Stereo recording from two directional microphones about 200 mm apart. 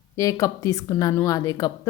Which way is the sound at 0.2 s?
15° left (ahead or behind).